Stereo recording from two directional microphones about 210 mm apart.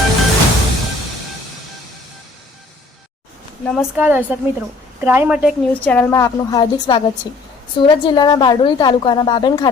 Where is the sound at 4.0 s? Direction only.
10° right (ahead or behind).